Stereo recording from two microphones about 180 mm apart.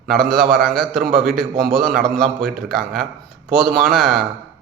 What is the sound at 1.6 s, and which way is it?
A man's voice, centre (ahead or behind).